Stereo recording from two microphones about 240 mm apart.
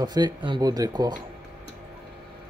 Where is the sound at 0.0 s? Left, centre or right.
Centre.